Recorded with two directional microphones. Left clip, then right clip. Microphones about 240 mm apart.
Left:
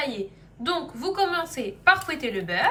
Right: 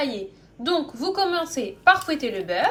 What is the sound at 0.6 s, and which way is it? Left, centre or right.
Speech, centre.